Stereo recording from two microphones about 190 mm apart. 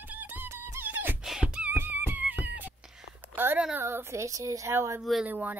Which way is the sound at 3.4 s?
10° right (ahead or behind).